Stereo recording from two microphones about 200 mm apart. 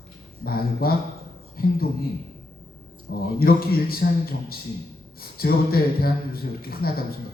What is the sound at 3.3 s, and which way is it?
Speech, 50° left (ahead or behind).